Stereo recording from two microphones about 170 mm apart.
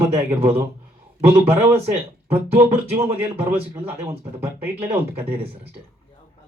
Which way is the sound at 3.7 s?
15° right (ahead or behind).